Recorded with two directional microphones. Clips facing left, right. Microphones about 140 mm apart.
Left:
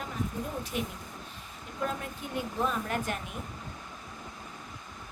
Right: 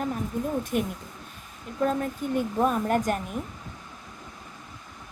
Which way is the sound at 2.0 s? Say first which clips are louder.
Right 9 dB; 45° right (ahead or behind).